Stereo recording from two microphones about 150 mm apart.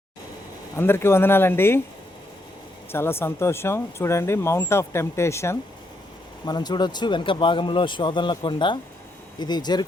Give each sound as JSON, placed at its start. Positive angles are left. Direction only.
{"t": 0.8, "sound": "speech", "side_deg": 15}
{"t": 2.9, "sound": "speech", "side_deg": 15}